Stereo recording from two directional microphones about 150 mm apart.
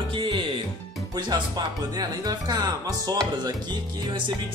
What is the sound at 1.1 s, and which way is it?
Speech, 25° right (ahead or behind).